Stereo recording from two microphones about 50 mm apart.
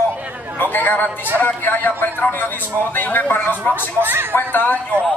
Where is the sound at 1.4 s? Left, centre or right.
Left.